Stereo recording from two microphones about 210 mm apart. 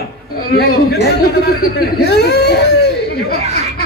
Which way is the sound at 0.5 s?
45° left (ahead or behind).